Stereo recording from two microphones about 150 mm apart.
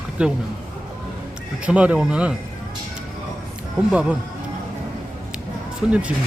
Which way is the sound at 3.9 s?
10° right (ahead or behind).